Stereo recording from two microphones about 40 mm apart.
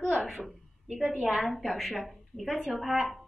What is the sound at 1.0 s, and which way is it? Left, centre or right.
Speech, centre.